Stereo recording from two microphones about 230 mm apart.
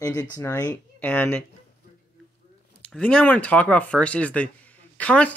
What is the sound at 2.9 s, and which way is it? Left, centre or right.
Speech, centre.